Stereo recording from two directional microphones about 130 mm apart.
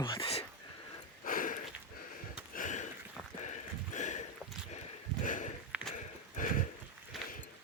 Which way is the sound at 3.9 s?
70° left (ahead or behind).